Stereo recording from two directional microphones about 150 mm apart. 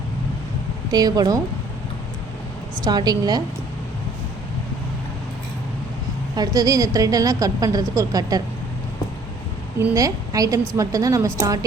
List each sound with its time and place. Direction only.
0.9 s a woman's voice: 25° right (ahead or behind)
2.8 s a woman's voice: 25° right (ahead or behind)
6.3 s a woman's voice: 25° right (ahead or behind)
9.7 s a woman's voice: 20° right (ahead or behind)